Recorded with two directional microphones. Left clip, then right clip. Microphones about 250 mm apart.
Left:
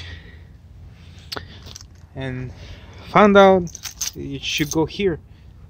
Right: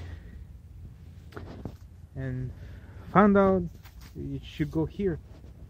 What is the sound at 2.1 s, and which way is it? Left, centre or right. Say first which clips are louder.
Speech: left 9 dB; centre.